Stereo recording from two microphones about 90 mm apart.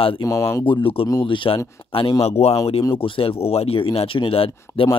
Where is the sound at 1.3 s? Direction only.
65° left (ahead or behind).